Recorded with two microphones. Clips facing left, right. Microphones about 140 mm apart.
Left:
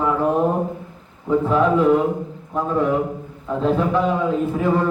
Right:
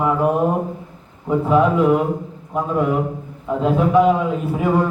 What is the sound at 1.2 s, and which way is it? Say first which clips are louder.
A man's voice: right 1 dB; 10° right (ahead or behind).